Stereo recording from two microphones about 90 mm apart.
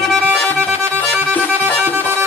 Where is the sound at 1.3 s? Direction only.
20° left (ahead or behind).